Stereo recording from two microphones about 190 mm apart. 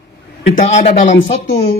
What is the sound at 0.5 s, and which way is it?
A man's voice, 40° left (ahead or behind).